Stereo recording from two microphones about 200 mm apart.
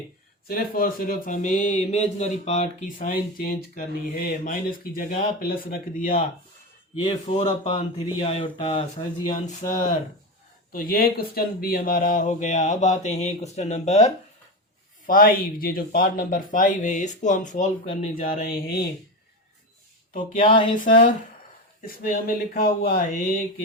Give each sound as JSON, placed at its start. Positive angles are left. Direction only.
{"t": 0.4, "sound": "speech", "side_deg": 50}
{"t": 7.0, "sound": "speech", "side_deg": 30}
{"t": 10.7, "sound": "speech", "side_deg": 45}
{"t": 15.0, "sound": "speech", "side_deg": 45}
{"t": 20.1, "sound": "speech", "side_deg": 30}
{"t": 21.8, "sound": "speech", "side_deg": 45}